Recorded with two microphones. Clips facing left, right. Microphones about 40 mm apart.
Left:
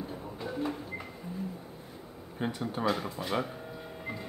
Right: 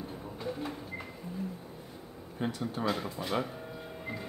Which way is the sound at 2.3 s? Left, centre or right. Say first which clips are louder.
Left 1 dB; centre.